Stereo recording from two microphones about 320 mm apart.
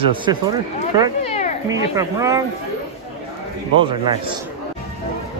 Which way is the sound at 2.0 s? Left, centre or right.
Centre.